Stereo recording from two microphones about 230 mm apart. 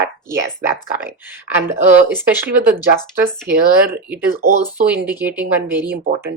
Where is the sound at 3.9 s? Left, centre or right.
Centre.